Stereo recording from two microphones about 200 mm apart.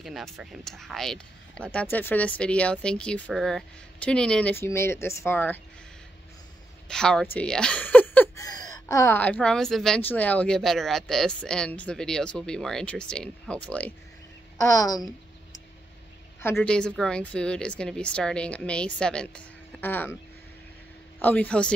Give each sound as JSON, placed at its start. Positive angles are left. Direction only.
{"t": 0.0, "sound": "speech", "side_deg": 0}
{"t": 6.9, "sound": "speech", "side_deg": 5}
{"t": 16.5, "sound": "speech", "side_deg": 5}
{"t": 21.2, "sound": "speech", "side_deg": 5}